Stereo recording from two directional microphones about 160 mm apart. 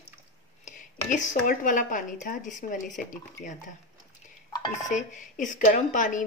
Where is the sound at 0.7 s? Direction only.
55° left (ahead or behind).